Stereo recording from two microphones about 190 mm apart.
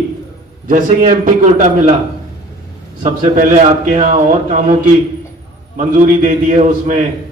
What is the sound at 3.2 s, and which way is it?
A man's voice, 45° right (ahead or behind).